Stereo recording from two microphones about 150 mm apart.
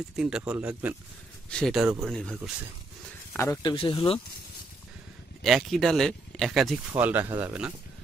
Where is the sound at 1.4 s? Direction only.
5° left (ahead or behind).